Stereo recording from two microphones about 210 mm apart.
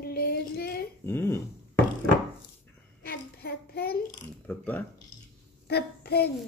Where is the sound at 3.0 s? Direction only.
45° left (ahead or behind).